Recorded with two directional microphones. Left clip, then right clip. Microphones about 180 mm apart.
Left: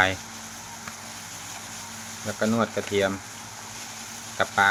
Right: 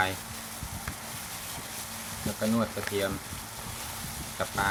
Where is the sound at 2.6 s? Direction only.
35° left (ahead or behind).